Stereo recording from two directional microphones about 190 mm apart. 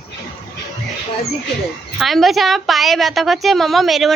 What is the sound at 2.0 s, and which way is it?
A woman's voice, centre (ahead or behind).